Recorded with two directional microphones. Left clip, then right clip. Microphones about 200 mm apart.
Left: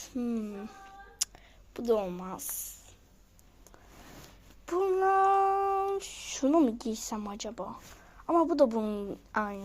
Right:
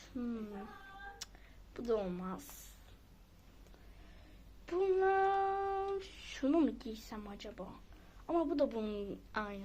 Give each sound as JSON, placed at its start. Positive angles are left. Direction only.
{"t": 0.0, "sound": "speech", "side_deg": 30}
{"t": 1.2, "sound": "a sound", "side_deg": 35}
{"t": 1.7, "sound": "speech", "side_deg": 30}
{"t": 4.6, "sound": "female singing", "side_deg": 20}
{"t": 6.5, "sound": "speech", "side_deg": 10}
{"t": 6.7, "sound": "a woman's voice", "side_deg": 30}